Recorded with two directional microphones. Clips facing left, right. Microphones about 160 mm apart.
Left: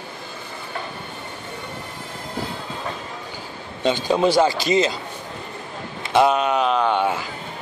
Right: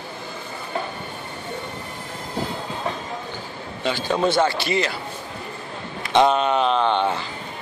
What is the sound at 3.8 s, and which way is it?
Speech, 15° left (ahead or behind).